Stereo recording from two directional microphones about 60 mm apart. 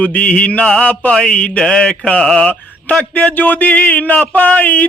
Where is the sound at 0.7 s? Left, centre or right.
Centre.